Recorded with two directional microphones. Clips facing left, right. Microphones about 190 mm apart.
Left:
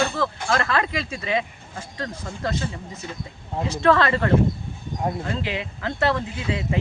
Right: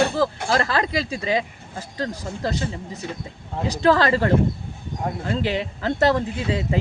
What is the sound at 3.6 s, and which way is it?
Speech, 35° right (ahead or behind).